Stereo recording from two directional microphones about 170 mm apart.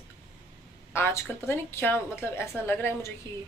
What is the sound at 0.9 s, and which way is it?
A woman's voice, 15° left (ahead or behind).